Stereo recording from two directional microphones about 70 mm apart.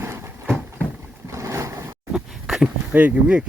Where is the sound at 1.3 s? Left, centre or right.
Right.